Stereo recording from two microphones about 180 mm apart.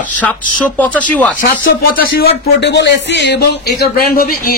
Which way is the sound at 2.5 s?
75° left (ahead or behind).